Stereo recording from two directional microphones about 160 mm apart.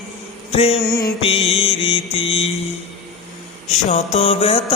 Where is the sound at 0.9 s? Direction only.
25° left (ahead or behind).